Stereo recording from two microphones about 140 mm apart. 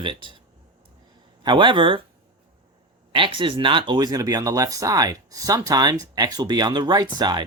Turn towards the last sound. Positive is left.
turn(degrees=-30)  # may be behind; listen again after turning